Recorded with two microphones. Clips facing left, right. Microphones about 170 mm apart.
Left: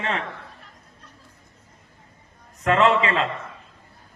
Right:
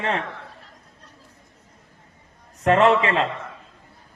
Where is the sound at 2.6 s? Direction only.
45° right (ahead or behind).